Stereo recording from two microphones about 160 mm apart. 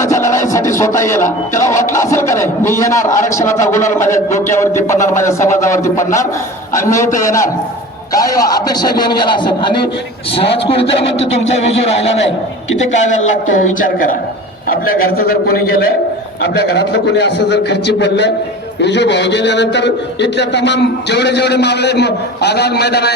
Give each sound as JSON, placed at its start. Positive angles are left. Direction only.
{"t": 0.0, "sound": "music", "side_deg": 20}
{"t": 2.0, "sound": "speech", "side_deg": 15}
{"t": 3.8, "sound": "a man's voice", "side_deg": 50}
{"t": 4.5, "sound": "speech", "side_deg": 15}
{"t": 7.2, "sound": "a man's voice", "side_deg": 20}
{"t": 13.6, "sound": "a woman's voice", "side_deg": 55}
{"t": 16.6, "sound": "a man's voice", "side_deg": 90}